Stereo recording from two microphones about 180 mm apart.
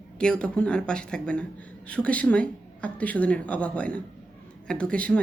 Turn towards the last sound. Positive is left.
turn(degrees=5)  # may be behind; listen again after turning